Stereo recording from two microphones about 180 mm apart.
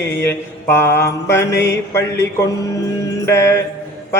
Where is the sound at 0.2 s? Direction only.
15° left (ahead or behind).